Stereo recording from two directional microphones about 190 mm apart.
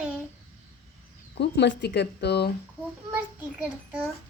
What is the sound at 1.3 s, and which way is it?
Speech, 65° left (ahead or behind).